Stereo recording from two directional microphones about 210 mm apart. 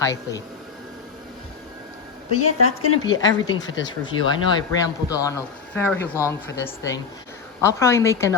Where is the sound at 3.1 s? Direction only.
65° left (ahead or behind).